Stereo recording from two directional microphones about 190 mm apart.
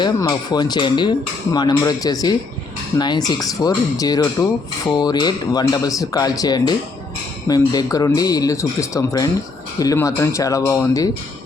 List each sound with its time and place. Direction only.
0.0 s speech: 20° left (ahead or behind)
3.2 s speech: 20° left (ahead or behind)